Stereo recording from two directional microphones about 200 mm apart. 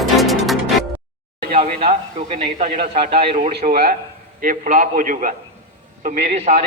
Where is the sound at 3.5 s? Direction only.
50° right (ahead or behind).